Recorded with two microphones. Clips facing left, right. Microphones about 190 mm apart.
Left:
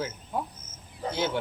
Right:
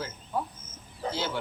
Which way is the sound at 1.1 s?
20° left (ahead or behind).